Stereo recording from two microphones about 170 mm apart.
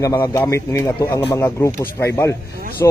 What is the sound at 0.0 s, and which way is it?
A man's voice, 15° left (ahead or behind).